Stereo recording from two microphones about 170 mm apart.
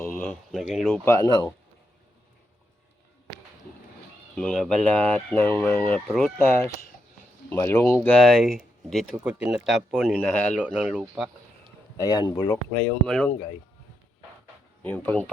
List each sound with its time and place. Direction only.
0.0 s a sound: 15° left (ahead or behind)
0.5 s speech: centre (ahead or behind)
1.0 s speech: 20° left (ahead or behind)
4.4 s speech: 5° left (ahead or behind)
6.1 s speech: centre (ahead or behind)
7.5 s speech: 15° left (ahead or behind)
8.1 s speech: centre (ahead or behind)
10.6 s speech: 5° right (ahead or behind)
11.9 s speech: 25° left (ahead or behind)
13.1 s speech: 5° left (ahead or behind)
14.8 s speech: 10° left (ahead or behind)